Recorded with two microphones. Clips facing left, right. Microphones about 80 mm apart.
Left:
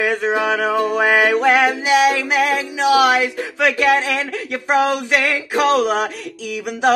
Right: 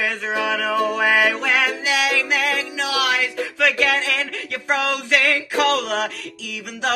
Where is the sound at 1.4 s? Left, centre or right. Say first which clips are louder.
Left 6 dB; left.